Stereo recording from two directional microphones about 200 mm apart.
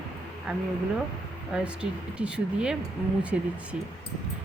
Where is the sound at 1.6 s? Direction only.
5° right (ahead or behind).